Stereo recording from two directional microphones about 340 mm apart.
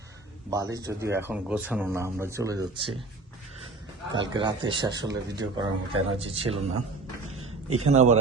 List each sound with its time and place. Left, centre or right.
0.5 s speech: centre
4.1 s speech: centre
7.3 s a sound: right
7.9 s a man's voice: right